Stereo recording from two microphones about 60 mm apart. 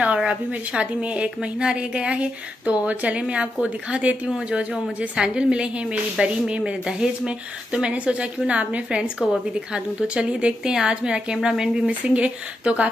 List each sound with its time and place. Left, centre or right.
0.0 s a woman's voice: right
11.9 s a woman's voice: right